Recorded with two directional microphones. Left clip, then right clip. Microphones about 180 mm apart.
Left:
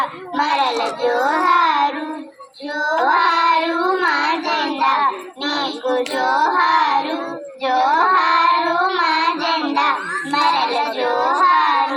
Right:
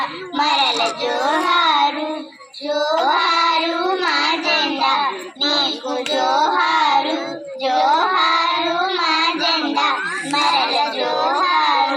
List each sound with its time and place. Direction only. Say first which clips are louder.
0.3 s child singing: right 1 dB; 30° right (ahead or behind)
1.0 s music: left 4 dB; 25° right (ahead or behind)
2.7 s child singing: left 1 dB; 20° right (ahead or behind)